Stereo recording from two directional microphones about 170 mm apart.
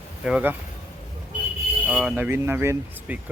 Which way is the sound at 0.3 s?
5° right (ahead or behind).